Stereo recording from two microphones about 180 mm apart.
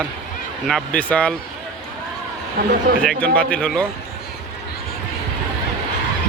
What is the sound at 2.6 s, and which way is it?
Speech, 55° right (ahead or behind).